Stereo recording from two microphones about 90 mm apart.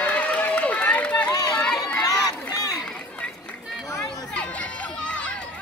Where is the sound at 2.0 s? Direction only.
40° left (ahead or behind).